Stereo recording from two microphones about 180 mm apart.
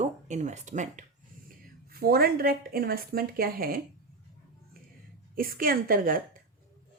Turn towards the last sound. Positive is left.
turn(degrees=-50)  # may be behind; listen again after turning